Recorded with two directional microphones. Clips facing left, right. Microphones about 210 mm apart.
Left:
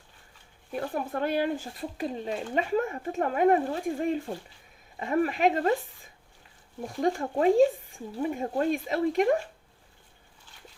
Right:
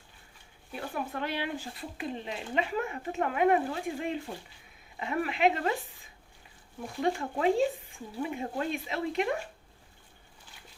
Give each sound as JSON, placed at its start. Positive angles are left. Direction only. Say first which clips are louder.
{"t": 0.7, "sound": "speech", "louder": "left 5 dB", "side_deg": 45}
{"t": 7.0, "sound": "speech", "louder": "left 4 dB", "side_deg": 40}